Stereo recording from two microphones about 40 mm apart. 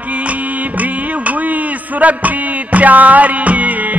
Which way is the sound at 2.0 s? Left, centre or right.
Right.